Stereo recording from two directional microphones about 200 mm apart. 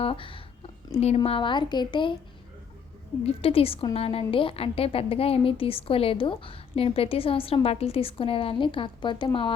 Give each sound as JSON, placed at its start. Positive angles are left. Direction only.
{"t": 0.0, "sound": "a woman's voice", "side_deg": 25}
{"t": 3.2, "sound": "a woman's voice", "side_deg": 30}